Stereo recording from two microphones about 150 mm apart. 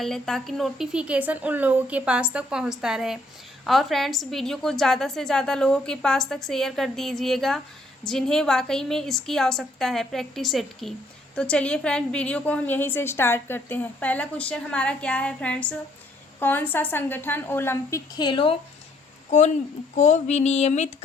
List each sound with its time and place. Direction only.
0.0 s a woman's voice: 5° left (ahead or behind)
18.1 s speech: 30° left (ahead or behind)
20.0 s a sound: 50° left (ahead or behind)